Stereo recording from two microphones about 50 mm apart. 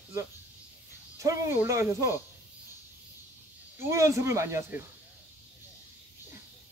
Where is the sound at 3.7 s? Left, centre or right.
Right.